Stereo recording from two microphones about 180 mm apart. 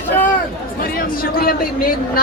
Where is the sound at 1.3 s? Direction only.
55° left (ahead or behind).